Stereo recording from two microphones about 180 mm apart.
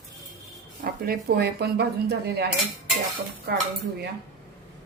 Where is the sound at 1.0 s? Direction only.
60° right (ahead or behind).